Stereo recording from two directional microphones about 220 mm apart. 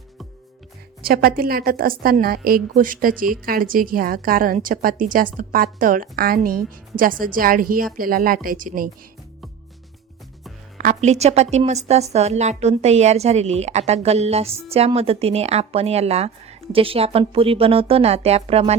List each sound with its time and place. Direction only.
1.0 s a woman's voice: 40° right (ahead or behind)
10.8 s a woman's voice: 35° right (ahead or behind)